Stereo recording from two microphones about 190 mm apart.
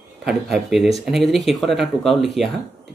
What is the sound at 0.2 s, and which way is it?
Speech, 5° right (ahead or behind).